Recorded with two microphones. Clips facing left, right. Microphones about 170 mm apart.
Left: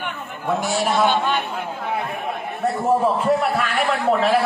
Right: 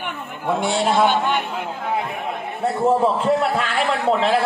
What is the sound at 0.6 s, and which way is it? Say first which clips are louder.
Speech: right 3 dB; 25° right (ahead or behind).